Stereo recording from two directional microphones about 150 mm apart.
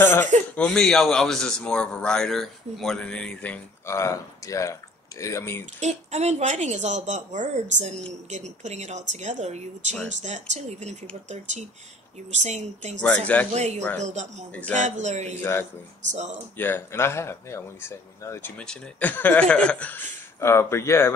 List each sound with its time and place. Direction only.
0.0 s a man's voice: 15° left (ahead or behind)
5.8 s speech: 50° right (ahead or behind)
14.5 s a man's voice: 10° left (ahead or behind)
14.8 s speech: 50° right (ahead or behind)
16.5 s a man's voice: 15° left (ahead or behind)